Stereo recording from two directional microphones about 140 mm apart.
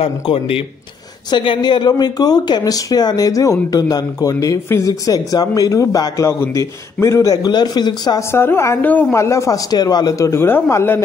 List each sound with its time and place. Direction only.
0.0 s speech: 40° left (ahead or behind)
8.3 s speech: 15° left (ahead or behind)